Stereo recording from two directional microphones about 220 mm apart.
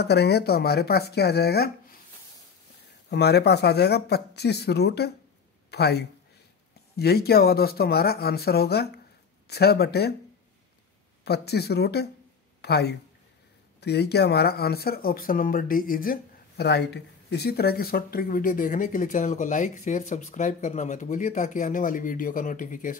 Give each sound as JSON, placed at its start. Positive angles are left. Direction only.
{"t": 0.0, "sound": "speech", "side_deg": 50}
{"t": 3.1, "sound": "speech", "side_deg": 50}
{"t": 11.2, "sound": "speech", "side_deg": 45}